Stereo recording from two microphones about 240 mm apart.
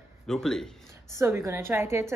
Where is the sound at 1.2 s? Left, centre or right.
Centre.